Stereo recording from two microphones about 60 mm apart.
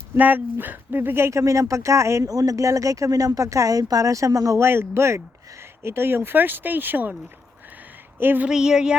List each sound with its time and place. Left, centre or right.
0.2 s speech: right
1.3 s speech: right
4.5 s a man's voice: right
8.2 s speech: right
8.4 s a sound: centre